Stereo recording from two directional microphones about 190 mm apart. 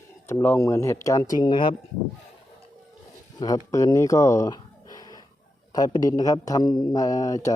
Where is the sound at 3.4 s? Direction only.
20° left (ahead or behind).